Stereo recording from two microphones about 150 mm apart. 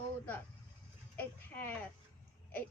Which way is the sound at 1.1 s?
10° left (ahead or behind).